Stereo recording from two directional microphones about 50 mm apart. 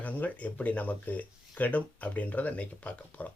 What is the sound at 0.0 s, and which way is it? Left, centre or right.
Speech, left.